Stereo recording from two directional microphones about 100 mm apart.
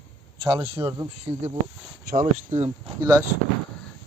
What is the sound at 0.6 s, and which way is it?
Speech, 30° right (ahead or behind).